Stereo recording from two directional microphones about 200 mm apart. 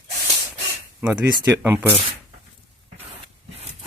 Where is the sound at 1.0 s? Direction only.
10° right (ahead or behind).